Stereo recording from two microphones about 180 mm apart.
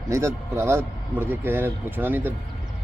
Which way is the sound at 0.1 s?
15° right (ahead or behind).